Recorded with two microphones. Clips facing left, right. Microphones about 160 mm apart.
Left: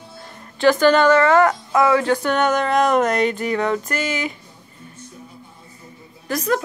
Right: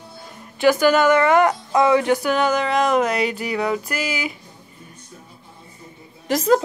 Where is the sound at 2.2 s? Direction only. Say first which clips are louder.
Left 1 dB; 5° right (ahead or behind).